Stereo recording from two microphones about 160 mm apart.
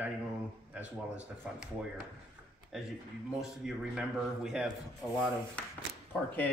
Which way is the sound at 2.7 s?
Centre (ahead or behind).